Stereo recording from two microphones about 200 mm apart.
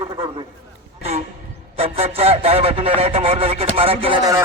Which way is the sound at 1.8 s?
30° right (ahead or behind).